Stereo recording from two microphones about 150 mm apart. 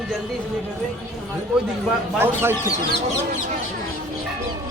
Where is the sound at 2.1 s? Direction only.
15° right (ahead or behind).